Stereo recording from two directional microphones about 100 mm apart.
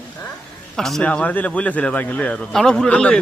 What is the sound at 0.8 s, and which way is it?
Speech, 5° left (ahead or behind).